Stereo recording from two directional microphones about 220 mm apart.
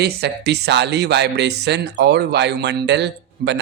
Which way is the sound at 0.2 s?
50° right (ahead or behind).